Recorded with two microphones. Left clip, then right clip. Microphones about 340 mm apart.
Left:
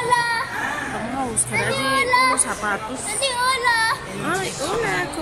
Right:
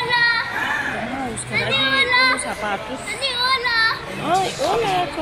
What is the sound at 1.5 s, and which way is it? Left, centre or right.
Child singing, centre.